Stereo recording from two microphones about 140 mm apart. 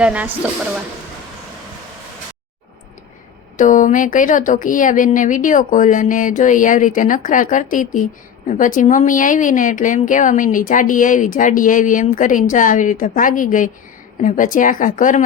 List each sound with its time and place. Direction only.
0.0 s speech: 10° right (ahead or behind)
3.6 s speech: 65° left (ahead or behind)